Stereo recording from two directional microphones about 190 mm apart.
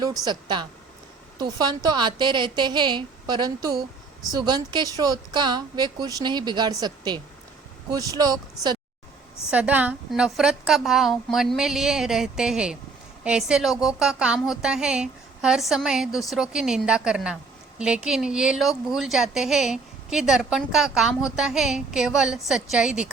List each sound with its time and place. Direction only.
0.3 s a woman's voice: 25° right (ahead or behind)
9.5 s a woman's voice: 5° right (ahead or behind)